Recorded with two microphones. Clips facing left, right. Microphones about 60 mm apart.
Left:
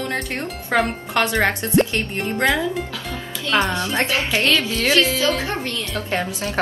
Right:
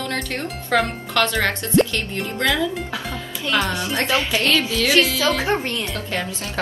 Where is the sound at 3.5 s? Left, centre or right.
Left.